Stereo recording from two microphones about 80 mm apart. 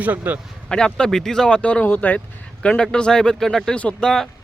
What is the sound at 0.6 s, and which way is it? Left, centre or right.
Speech, centre.